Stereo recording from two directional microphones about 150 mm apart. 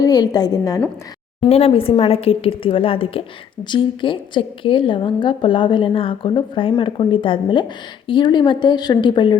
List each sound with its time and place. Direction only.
0.0 s a woman's voice: 25° left (ahead or behind)
1.5 s a woman's voice: 45° left (ahead or behind)